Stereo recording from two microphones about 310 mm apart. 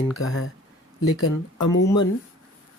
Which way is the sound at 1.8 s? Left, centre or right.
Centre.